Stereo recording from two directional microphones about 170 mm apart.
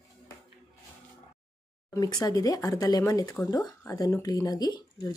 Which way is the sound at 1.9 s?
20° left (ahead or behind).